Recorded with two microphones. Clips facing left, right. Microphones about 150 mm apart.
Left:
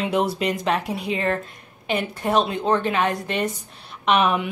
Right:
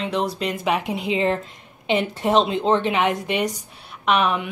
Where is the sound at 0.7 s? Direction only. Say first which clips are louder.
Right 1 dB; 15° right (ahead or behind).